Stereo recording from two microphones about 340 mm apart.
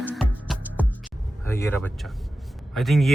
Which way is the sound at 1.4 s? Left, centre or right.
Centre.